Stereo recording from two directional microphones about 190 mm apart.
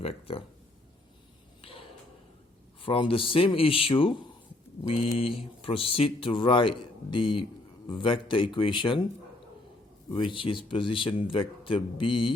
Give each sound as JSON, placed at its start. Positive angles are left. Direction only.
{"t": 0.0, "sound": "speech", "side_deg": 30}
{"t": 2.8, "sound": "speech", "side_deg": 30}
{"t": 10.1, "sound": "speech", "side_deg": 25}